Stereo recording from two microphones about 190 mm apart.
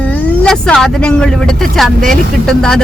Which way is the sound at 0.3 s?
5° left (ahead or behind).